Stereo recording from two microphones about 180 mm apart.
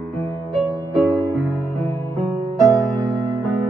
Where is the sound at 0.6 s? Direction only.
5° left (ahead or behind).